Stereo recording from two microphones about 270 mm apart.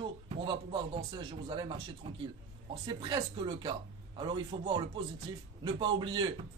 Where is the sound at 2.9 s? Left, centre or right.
Centre.